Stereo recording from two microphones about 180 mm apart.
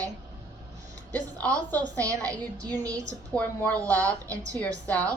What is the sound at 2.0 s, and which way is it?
A woman's voice, 20° right (ahead or behind).